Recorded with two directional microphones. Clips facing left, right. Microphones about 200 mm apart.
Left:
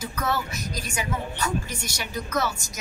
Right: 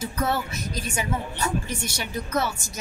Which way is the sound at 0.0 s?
30° right (ahead or behind).